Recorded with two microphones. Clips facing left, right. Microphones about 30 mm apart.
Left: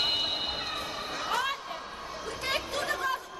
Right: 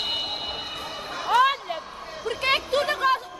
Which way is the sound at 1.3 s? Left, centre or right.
Right.